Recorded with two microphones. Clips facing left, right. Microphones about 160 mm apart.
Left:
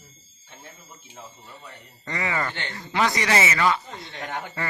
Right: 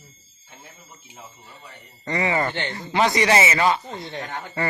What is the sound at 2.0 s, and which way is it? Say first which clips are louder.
Speech: right 5 dB; 25° right (ahead or behind).